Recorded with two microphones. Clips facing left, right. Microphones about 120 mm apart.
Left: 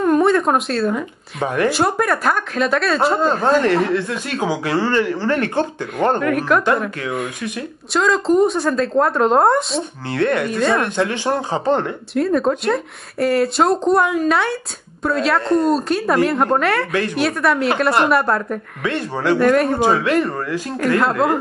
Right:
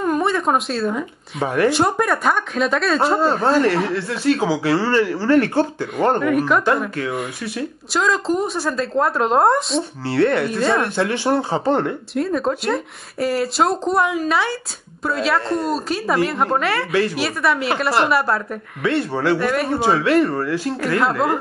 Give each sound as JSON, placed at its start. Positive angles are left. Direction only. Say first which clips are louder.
{"t": 0.0, "sound": "speech", "louder": "left 4 dB", "side_deg": 0}
{"t": 3.3, "sound": "speech", "louder": "left 1 dB", "side_deg": 20}
{"t": 5.9, "sound": "speech", "louder": "even", "side_deg": -5}
{"t": 10.1, "sound": "speech", "louder": "right 1 dB", "side_deg": 20}
{"t": 10.4, "sound": "speech", "louder": "left 1 dB", "side_deg": -5}
{"t": 11.0, "sound": "speech", "louder": "right 1 dB", "side_deg": 20}
{"t": 12.1, "sound": "speech", "louder": "left 6 dB", "side_deg": 0}
{"t": 18.9, "sound": "speech", "louder": "right 1 dB", "side_deg": 15}
{"t": 19.3, "sound": "speech", "louder": "left 9 dB", "side_deg": -5}
{"t": 19.8, "sound": "speech", "louder": "even", "side_deg": 15}
{"t": 21.2, "sound": "speech", "louder": "left 3 dB", "side_deg": 0}